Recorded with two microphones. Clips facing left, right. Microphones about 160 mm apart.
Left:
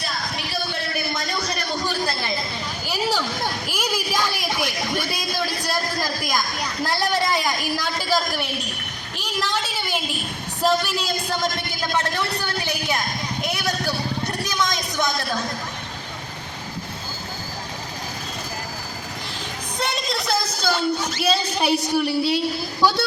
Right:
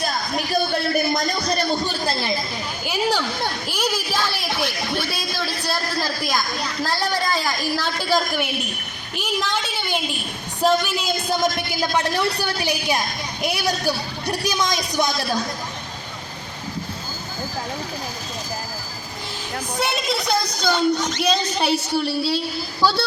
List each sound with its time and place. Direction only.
0.0 s a sound: 45° right (ahead or behind)
2.8 s a sound: centre (ahead or behind)
6.8 s a woman's voice: 20° left (ahead or behind)
8.1 s a woman's voice: centre (ahead or behind)
10.6 s a woman's voice: centre (ahead or behind)
11.8 s a woman's voice: 15° right (ahead or behind)
14.6 s speech: 20° right (ahead or behind)
19.8 s speech: centre (ahead or behind); by 23.0 s 20° left (ahead or behind)